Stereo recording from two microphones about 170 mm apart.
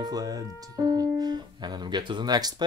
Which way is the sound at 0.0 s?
20° right (ahead or behind).